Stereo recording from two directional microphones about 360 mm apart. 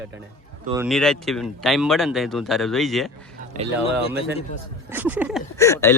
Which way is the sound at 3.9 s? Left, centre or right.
Centre.